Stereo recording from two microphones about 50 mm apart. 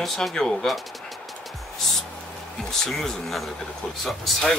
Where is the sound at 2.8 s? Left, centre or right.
Centre.